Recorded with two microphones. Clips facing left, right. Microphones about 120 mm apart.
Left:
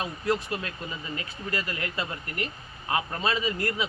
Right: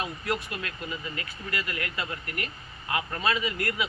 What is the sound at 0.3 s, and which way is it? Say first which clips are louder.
Speech: left 6 dB; 30° left (ahead or behind).